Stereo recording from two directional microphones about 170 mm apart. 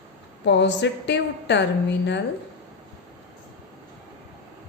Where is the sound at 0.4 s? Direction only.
90° left.